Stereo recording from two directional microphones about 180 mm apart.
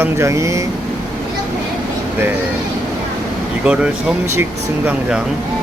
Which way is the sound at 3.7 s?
5° right (ahead or behind).